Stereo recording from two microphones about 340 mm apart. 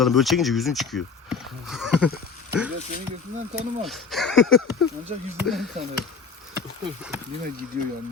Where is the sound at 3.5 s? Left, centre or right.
Centre.